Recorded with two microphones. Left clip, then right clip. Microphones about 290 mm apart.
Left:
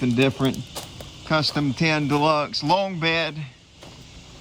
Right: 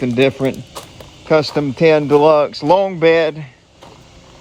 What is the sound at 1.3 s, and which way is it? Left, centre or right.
Speech, centre.